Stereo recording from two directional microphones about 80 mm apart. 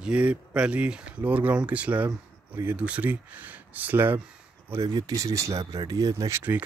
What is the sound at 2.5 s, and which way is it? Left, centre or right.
Speech, right.